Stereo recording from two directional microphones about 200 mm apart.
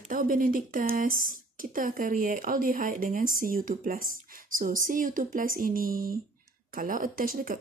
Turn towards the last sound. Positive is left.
turn(degrees=-45)  # may be behind; listen again after turning